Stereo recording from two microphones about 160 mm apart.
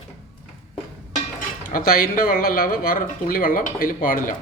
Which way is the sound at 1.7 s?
65° left (ahead or behind).